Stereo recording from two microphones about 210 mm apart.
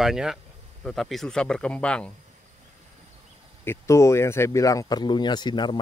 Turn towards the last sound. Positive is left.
turn(degrees=20)  # may be behind; listen again after turning